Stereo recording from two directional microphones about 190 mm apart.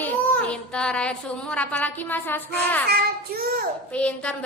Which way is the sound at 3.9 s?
5° left (ahead or behind).